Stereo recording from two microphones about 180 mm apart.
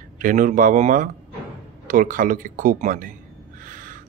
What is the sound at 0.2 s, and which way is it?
Speech, 50° right (ahead or behind).